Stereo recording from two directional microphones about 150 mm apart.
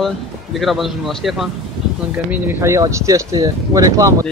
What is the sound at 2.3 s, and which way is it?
Speech, 15° right (ahead or behind).